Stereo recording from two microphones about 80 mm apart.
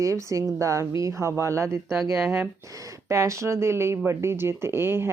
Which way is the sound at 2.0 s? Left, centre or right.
Centre.